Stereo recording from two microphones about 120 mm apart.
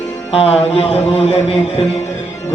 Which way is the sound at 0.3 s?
55° left (ahead or behind).